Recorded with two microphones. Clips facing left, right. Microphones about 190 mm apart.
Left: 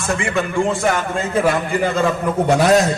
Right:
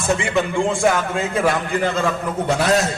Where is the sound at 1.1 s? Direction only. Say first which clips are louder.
Left 2 dB; centre (ahead or behind).